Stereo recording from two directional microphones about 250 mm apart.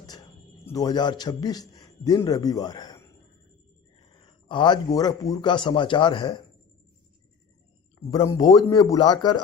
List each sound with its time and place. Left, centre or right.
0.0 s a man's voice: centre
4.1 s a man's voice: centre
8.1 s speech: centre